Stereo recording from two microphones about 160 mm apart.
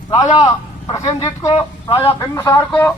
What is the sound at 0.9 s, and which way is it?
Speech, 25° left (ahead or behind).